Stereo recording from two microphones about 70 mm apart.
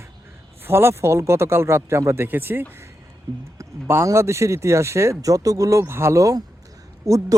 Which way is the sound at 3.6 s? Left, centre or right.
Right.